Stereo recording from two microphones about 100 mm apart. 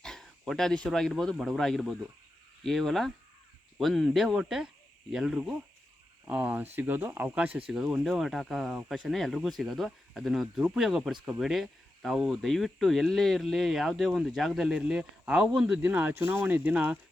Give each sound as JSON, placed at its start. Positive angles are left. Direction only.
{"t": 0.0, "sound": "speech", "side_deg": 5}